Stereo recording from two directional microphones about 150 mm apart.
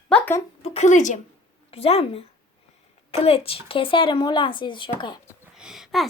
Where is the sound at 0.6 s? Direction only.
45° left (ahead or behind).